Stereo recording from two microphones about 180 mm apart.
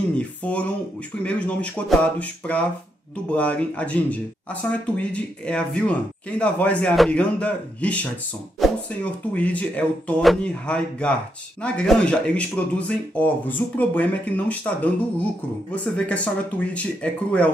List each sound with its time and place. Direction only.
0.2 s speech: 10° left (ahead or behind)